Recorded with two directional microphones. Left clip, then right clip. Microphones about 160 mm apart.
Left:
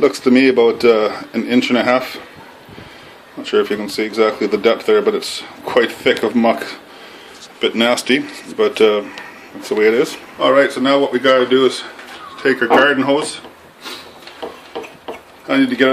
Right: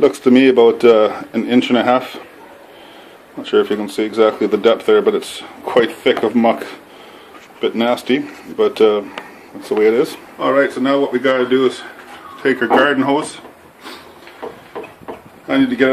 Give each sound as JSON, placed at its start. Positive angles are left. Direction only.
{"t": 0.0, "sound": "speech", "side_deg": -10}
{"t": 3.4, "sound": "speech", "side_deg": -10}
{"t": 12.4, "sound": "speech", "side_deg": -20}
{"t": 15.4, "sound": "speech", "side_deg": -5}